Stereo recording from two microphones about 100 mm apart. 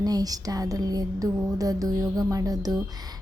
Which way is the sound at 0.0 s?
40° right (ahead or behind).